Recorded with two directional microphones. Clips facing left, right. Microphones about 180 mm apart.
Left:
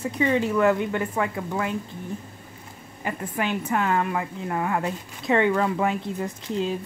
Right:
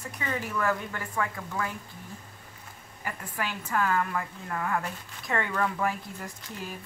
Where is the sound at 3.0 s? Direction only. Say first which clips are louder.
Left 7 dB; 20° left (ahead or behind).